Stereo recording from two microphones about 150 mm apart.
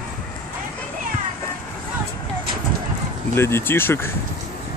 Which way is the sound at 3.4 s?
15° left (ahead or behind).